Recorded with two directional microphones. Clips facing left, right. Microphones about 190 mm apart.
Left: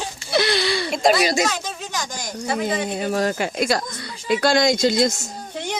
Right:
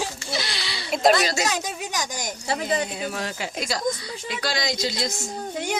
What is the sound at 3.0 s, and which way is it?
Speech, 45° left (ahead or behind).